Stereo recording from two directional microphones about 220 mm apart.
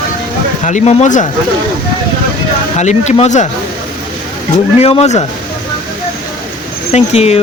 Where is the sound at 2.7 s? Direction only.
30° left (ahead or behind).